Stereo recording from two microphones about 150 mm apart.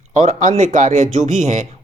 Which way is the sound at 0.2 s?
55° right (ahead or behind).